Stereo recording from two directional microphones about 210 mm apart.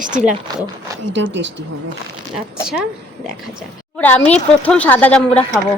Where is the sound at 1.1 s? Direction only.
60° right (ahead or behind).